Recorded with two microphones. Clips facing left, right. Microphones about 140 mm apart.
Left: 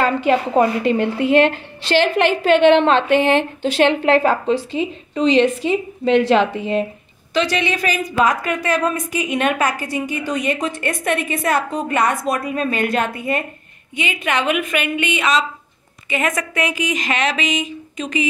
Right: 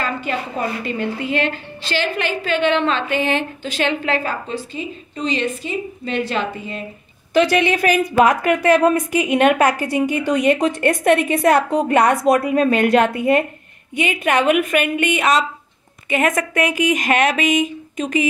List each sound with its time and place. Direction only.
0.0 s a woman's voice: 80° left
7.3 s speech: 55° right (ahead or behind)
13.9 s speech: 55° right (ahead or behind)